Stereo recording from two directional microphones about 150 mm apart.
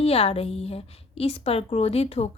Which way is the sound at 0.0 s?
40° left (ahead or behind).